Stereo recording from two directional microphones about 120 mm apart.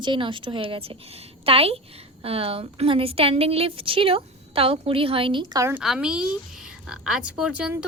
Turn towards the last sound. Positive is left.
turn(degrees=-10)  # may be behind; listen again after turning